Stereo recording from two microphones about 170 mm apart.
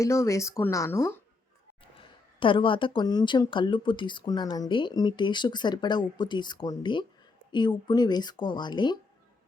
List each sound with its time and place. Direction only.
0.0 s speech: 20° left (ahead or behind)
1.8 s a woman's voice: 30° left (ahead or behind)